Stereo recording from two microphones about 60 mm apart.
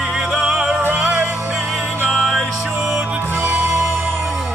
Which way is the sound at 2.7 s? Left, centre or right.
Centre.